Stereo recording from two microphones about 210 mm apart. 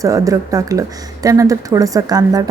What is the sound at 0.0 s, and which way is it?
A woman's voice, 15° right (ahead or behind).